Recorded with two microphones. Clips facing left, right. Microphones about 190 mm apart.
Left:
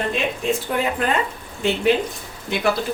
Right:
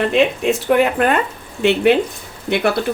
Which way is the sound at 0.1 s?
70° right (ahead or behind).